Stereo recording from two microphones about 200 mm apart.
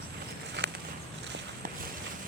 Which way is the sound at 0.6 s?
60° right (ahead or behind).